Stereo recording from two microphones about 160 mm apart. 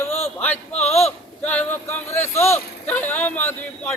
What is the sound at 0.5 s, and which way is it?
Speech, 45° left (ahead or behind).